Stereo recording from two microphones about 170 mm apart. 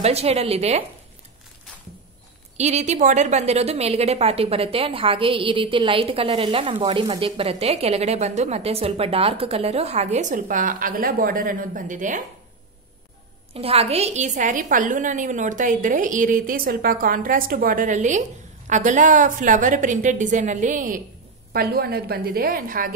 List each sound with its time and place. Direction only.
0.0 s a woman's voice: 40° right (ahead or behind)
2.5 s a woman's voice: 40° right (ahead or behind)
13.5 s a woman's voice: 35° right (ahead or behind); by 21.0 s 50° right (ahead or behind)
21.5 s a woman's voice: 65° right (ahead or behind)